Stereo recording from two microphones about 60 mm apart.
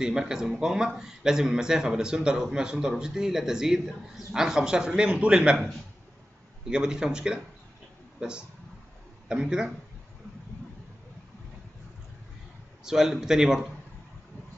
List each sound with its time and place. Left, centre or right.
0.0 s speech: centre
6.7 s speech: centre
12.8 s speech: centre